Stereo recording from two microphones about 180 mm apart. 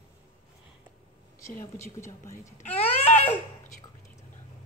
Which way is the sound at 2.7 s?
35° left (ahead or behind).